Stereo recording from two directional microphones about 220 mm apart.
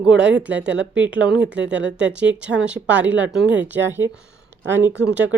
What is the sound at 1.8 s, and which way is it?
Speech, 5° right (ahead or behind).